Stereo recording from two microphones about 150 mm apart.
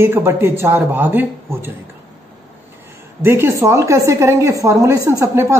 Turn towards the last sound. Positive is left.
turn(degrees=-15)  # may be behind; listen again after turning